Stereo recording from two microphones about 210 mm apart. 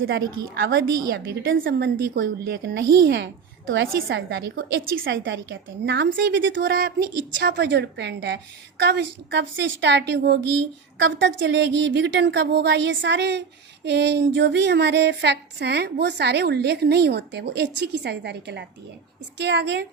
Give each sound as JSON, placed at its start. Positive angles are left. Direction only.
{"t": 0.2, "sound": "a woman's voice", "side_deg": -20}
{"t": 0.5, "sound": "a woman's voice", "side_deg": -60}
{"t": 13.8, "sound": "a sound", "side_deg": -55}
{"t": 19.4, "sound": "a woman's voice", "side_deg": -55}